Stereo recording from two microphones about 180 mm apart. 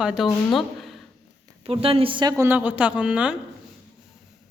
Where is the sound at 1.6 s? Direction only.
30° right (ahead or behind).